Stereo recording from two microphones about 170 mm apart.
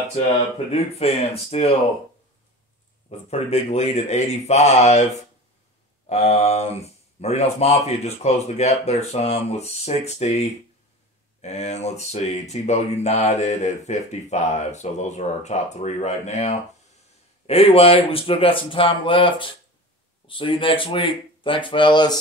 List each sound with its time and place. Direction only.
0.7 s speech: 35° left (ahead or behind)
3.1 s speech: 40° left (ahead or behind)
6.0 s speech: 40° left (ahead or behind)